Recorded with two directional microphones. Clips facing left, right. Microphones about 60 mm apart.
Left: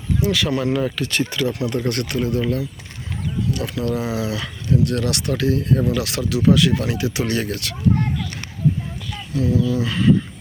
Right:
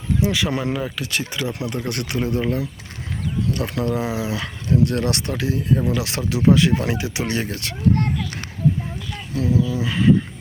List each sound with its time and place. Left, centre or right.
0.2 s speech: centre
1.3 s speech: centre
3.5 s speech: right
3.8 s speech: right
5.3 s speech: centre
9.5 s speech: centre